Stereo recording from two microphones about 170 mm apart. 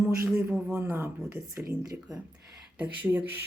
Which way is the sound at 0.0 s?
15° right (ahead or behind).